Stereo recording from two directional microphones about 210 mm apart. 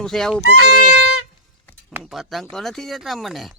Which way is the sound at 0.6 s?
45° left (ahead or behind).